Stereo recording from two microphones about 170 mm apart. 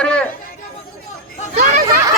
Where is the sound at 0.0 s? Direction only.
5° left (ahead or behind).